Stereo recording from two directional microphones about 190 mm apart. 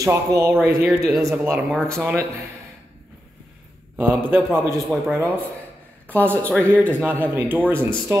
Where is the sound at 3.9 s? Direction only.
10° right (ahead or behind).